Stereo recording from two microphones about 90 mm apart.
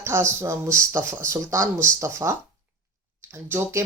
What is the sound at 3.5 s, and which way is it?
Speech, 30° right (ahead or behind).